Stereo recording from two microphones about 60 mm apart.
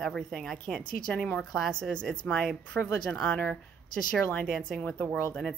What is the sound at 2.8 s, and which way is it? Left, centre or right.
Speech, left.